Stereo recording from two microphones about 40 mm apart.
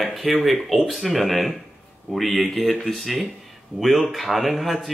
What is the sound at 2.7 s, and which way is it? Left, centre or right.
Speech, centre.